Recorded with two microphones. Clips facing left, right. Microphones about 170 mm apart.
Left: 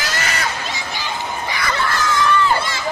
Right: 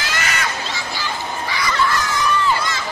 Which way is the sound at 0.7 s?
20° left (ahead or behind).